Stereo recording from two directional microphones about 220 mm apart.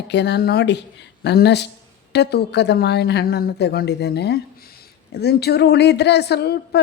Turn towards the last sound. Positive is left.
turn(degrees=50)  # may be behind; listen again after turning